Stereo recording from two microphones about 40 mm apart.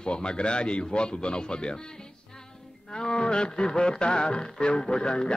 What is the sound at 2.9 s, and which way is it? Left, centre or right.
A man's voice, left.